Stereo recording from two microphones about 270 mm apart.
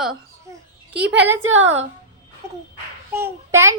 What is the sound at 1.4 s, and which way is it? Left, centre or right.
Speech, right.